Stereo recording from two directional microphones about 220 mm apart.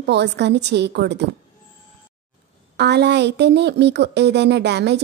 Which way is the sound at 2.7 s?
50° right (ahead or behind).